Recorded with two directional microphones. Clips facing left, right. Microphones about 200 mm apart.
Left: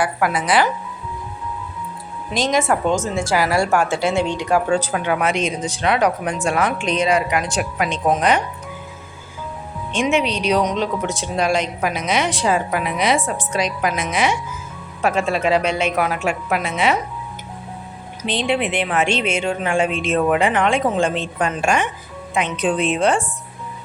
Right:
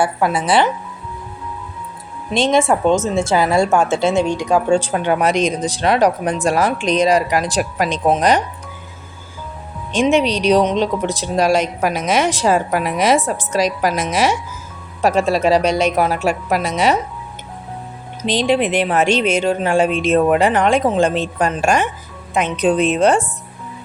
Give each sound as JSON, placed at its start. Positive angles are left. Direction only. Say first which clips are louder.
{"t": 0.0, "sound": "speech", "louder": "right 3 dB", "side_deg": -25}
{"t": 2.3, "sound": "speech", "louder": "right 4 dB", "side_deg": -25}
{"t": 4.7, "sound": "a woman's voice", "louder": "right 4 dB", "side_deg": -30}
{"t": 10.0, "sound": "a woman's voice", "louder": "right 4 dB", "side_deg": -35}
{"t": 18.2, "sound": "a woman's voice", "louder": "right 4 dB", "side_deg": -35}